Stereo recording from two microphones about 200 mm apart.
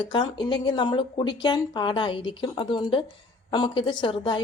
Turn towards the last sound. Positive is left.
turn(degrees=25)  # may be behind; listen again after turning